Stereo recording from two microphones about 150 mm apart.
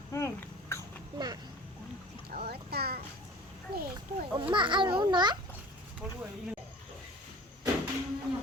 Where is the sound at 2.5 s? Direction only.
90° right.